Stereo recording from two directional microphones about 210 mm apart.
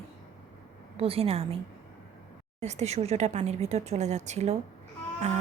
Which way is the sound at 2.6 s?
30° right (ahead or behind).